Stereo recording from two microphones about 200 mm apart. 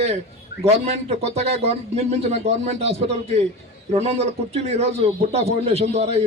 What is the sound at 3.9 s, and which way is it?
A man's voice, 30° right (ahead or behind).